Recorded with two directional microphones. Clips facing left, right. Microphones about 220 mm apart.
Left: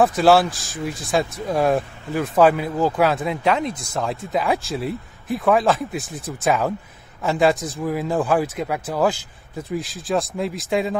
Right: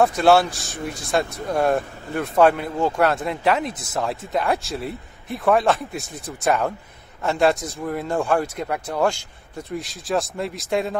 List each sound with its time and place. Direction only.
0.0 s speech: centre (ahead or behind)